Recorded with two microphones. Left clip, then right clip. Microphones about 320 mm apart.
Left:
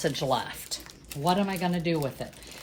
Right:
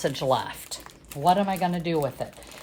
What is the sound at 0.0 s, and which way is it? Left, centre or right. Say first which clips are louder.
Speech: right 3 dB; right.